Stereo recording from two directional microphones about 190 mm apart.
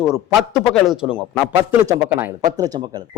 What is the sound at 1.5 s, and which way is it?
A man's voice, 15° right (ahead or behind).